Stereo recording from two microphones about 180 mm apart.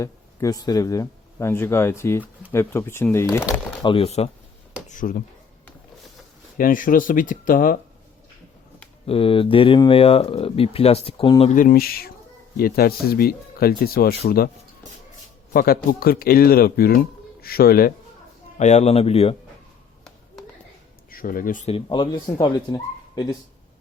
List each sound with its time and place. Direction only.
0.0 s speech: 20° left (ahead or behind)
3.8 s speech: 30° left (ahead or behind)
4.9 s speech: 50° left (ahead or behind)
6.6 s speech: 50° left (ahead or behind)
9.0 s speech: 30° left (ahead or behind)
11.5 s speech: 50° left (ahead or behind)
15.5 s speech: 55° left (ahead or behind)
18.5 s speech: 40° left (ahead or behind)
21.1 s speech: 50° left (ahead or behind)
21.7 s speech: 30° left (ahead or behind)